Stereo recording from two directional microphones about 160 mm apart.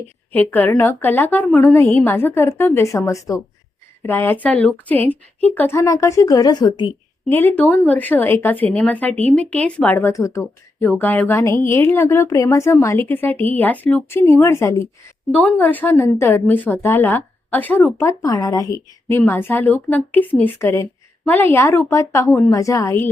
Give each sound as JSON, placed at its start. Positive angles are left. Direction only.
{"t": 0.3, "sound": "speech", "side_deg": 10}
{"t": 7.3, "sound": "speech", "side_deg": 10}